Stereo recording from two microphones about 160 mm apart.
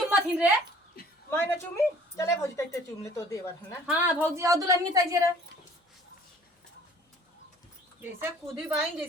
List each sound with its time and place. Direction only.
0.1 s a sound: 10° right (ahead or behind)
1.3 s speech: 15° left (ahead or behind)
3.8 s a woman's voice: 10° right (ahead or behind)
8.0 s speech: 10° right (ahead or behind)